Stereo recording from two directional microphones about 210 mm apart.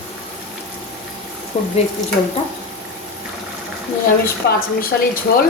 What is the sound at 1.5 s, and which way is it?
Speech, 30° left (ahead or behind).